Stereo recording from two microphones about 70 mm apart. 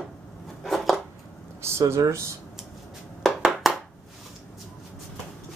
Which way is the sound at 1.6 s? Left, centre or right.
Right.